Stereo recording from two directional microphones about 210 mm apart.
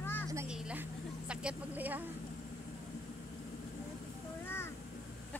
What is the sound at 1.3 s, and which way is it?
Speech, 5° right (ahead or behind).